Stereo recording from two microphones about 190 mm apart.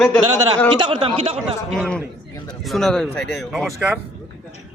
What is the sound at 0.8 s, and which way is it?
Speech, 25° right (ahead or behind).